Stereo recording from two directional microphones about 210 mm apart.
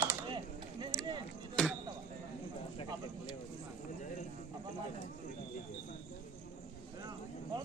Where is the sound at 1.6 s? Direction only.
5° left (ahead or behind).